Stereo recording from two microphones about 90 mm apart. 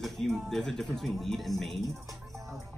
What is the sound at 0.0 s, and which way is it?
Speech, centre (ahead or behind).